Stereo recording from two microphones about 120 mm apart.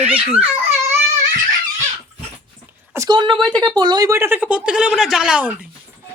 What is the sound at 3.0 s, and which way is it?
Speech, 40° right (ahead or behind).